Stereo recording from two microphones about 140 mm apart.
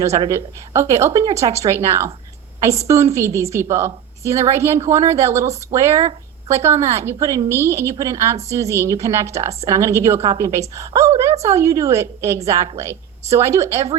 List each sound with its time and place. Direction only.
0.3 s a woman's voice: 20° right (ahead or behind)